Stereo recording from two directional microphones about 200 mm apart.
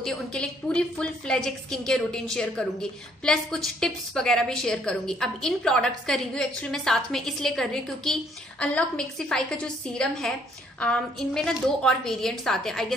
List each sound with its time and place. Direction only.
0.0 s a woman's voice: 5° left (ahead or behind)